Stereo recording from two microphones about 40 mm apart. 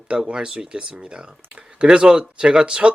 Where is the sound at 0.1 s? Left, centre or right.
Right.